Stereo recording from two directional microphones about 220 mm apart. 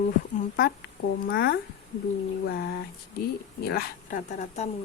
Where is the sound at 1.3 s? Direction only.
45° left (ahead or behind).